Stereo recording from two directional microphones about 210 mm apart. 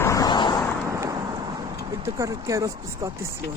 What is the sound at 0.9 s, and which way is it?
Vehicle, 15° right (ahead or behind).